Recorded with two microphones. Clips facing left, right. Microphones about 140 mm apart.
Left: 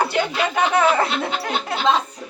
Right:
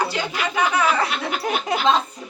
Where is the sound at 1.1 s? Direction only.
25° left (ahead or behind).